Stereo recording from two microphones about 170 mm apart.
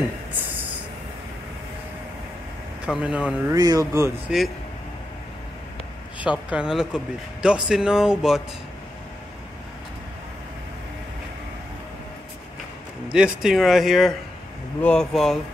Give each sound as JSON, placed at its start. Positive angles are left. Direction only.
{"t": 2.8, "sound": "speech", "side_deg": -5}
{"t": 3.5, "sound": "speech", "side_deg": -20}
{"t": 4.3, "sound": "speech", "side_deg": -5}
{"t": 6.2, "sound": "speech", "side_deg": -5}
{"t": 13.1, "sound": "speech", "side_deg": -5}